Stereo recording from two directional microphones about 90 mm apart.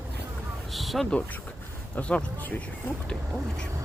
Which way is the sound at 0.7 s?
Centre (ahead or behind).